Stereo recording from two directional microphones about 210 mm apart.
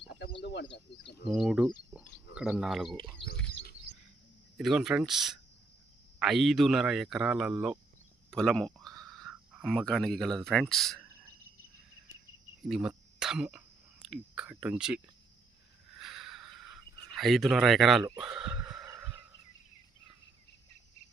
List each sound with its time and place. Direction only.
0.4 s speech: 55° left (ahead or behind)
1.3 s a man's voice: centre (ahead or behind)
4.5 s a man's voice: centre (ahead or behind)
12.6 s speech: 5° right (ahead or behind)
16.0 s a sound: centre (ahead or behind)
18.2 s speech: centre (ahead or behind)
18.9 s fowl: 5° right (ahead or behind)